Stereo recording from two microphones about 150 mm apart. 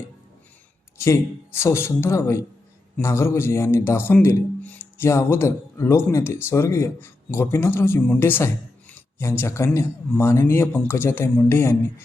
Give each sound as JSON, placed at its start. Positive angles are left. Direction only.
{"t": 0.9, "sound": "a man's voice", "side_deg": 20}